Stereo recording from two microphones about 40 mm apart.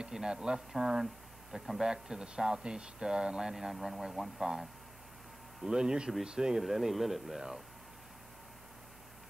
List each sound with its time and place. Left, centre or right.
0.1 s speech: centre
5.6 s speech: centre
6.6 s speech: centre